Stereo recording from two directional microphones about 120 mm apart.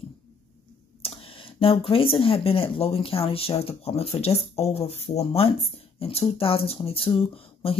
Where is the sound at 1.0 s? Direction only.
50° left (ahead or behind).